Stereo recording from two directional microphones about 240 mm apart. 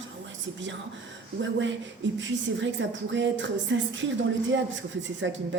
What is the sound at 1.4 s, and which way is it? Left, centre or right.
Speech, right.